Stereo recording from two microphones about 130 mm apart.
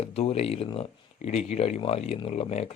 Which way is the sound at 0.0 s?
50° left (ahead or behind).